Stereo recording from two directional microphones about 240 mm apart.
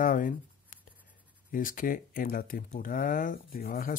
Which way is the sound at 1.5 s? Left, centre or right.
Left.